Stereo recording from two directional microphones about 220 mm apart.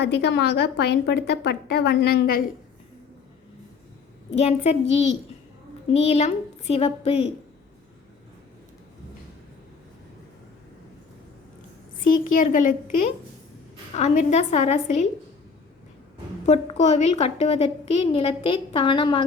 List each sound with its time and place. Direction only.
0.0 s a woman's voice: 50° left (ahead or behind)
4.3 s a woman's voice: 30° left (ahead or behind)
12.0 s a woman's voice: 40° left (ahead or behind)
16.8 s a woman's voice: 30° left (ahead or behind)